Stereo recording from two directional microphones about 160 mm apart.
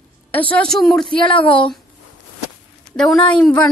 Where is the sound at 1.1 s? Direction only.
30° left (ahead or behind).